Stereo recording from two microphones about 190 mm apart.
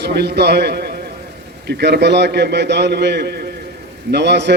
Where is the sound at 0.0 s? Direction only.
60° right (ahead or behind).